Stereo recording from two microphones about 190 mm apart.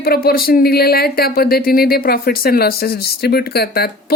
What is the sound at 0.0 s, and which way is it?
A woman's voice, 55° left (ahead or behind).